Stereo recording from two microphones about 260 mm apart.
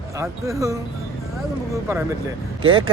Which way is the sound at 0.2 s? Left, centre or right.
Centre.